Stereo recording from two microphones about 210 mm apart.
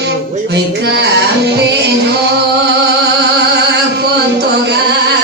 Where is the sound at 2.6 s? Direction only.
55° right (ahead or behind).